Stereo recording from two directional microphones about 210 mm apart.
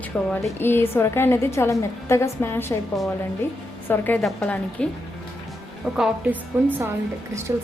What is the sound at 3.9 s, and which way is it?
Speech, 5° left (ahead or behind).